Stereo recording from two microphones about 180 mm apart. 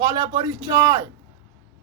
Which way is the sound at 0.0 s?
20° right (ahead or behind).